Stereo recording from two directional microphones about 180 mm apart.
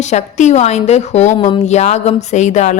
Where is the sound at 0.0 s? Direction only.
40° left (ahead or behind).